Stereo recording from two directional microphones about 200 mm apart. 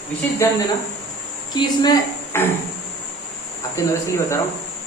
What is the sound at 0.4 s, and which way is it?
A man's voice, 15° left (ahead or behind).